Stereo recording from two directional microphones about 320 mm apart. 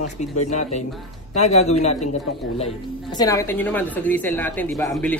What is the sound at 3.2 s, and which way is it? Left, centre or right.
A man's voice, centre.